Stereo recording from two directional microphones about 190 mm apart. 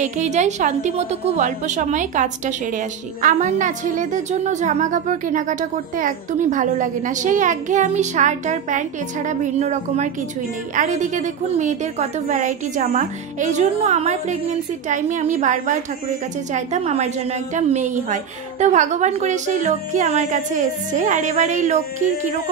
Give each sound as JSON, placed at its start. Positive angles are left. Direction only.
{"t": 0.0, "sound": "a woman's voice", "side_deg": -40}